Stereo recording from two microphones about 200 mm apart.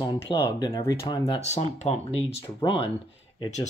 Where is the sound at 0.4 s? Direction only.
20° left (ahead or behind).